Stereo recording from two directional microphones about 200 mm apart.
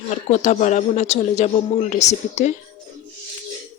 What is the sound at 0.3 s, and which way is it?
Speech, 35° left (ahead or behind).